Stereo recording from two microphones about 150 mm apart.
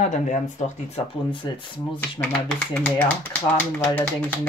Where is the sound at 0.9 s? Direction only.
35° left (ahead or behind).